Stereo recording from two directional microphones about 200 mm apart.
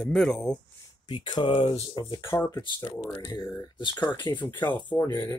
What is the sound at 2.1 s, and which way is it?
Speech, 15° left (ahead or behind).